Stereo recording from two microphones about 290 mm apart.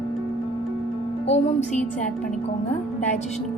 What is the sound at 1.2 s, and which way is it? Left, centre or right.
Speech, left.